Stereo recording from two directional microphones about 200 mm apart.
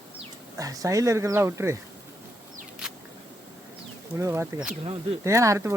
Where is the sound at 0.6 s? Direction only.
15° right (ahead or behind).